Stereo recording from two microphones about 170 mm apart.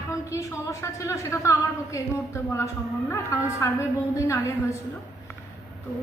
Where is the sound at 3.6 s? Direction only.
20° left (ahead or behind).